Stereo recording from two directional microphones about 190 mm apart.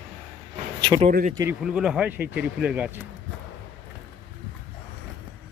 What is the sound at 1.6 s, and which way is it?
Speech, 5° right (ahead or behind).